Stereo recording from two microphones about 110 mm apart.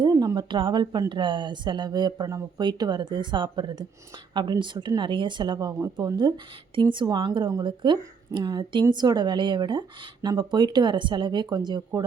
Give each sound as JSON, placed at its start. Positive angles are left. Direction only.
{"t": 0.0, "sound": "a sound", "side_deg": -40}
{"t": 0.3, "sound": "speech", "side_deg": -45}
{"t": 5.8, "sound": "speech", "side_deg": -30}
{"t": 6.1, "sound": "speech", "side_deg": -45}